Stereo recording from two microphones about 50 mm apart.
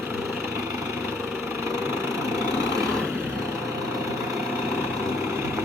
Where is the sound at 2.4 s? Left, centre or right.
Right.